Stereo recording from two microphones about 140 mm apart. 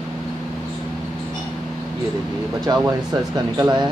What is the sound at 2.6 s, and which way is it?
Speech, 30° right (ahead or behind).